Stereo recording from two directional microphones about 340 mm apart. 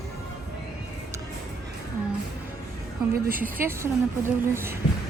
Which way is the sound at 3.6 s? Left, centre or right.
Centre.